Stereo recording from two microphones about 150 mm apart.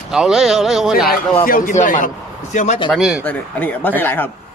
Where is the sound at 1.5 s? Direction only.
75° left (ahead or behind).